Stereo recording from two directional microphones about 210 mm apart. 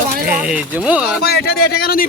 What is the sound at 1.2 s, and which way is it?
Speech, 50° left (ahead or behind).